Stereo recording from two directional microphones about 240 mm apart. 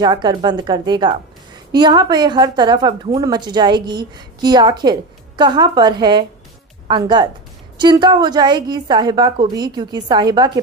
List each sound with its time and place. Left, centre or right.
0.0 s a woman's voice: centre